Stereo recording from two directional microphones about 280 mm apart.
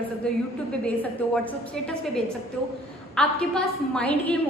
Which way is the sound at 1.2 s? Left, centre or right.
Centre.